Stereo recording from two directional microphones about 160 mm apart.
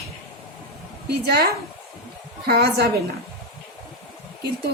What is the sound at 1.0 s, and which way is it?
A woman's voice, 85° right.